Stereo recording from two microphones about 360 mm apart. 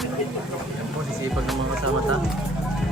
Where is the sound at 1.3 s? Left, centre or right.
Centre.